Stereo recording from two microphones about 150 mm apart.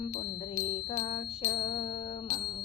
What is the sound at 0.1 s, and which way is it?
Music, 50° left (ahead or behind).